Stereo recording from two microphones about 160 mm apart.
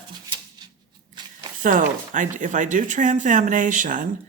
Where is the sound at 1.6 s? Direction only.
55° right (ahead or behind).